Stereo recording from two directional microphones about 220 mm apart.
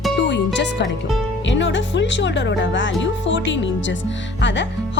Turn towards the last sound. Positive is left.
turn(degrees=55)  # may be behind; listen again after turning